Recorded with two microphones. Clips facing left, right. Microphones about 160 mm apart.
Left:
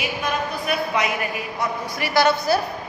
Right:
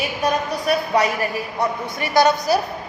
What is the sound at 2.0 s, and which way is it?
Speech, 20° right (ahead or behind).